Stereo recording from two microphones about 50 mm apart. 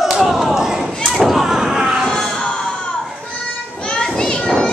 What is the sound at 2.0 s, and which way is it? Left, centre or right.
Music, centre.